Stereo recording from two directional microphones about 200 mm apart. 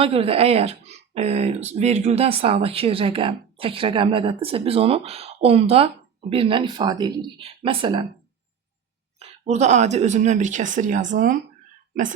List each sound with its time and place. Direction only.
0.0 s speech: 30° right (ahead or behind)
9.1 s speech: 35° right (ahead or behind)